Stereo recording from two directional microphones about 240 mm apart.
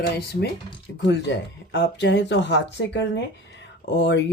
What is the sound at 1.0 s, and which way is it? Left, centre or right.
Speech, left.